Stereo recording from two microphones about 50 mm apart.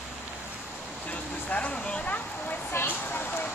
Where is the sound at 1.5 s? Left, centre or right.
Left.